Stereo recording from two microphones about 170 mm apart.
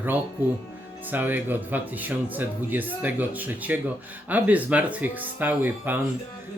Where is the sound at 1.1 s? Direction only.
10° right (ahead or behind).